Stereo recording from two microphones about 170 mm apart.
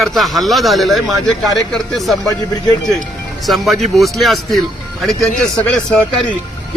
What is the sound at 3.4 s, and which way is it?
Speech, centre (ahead or behind).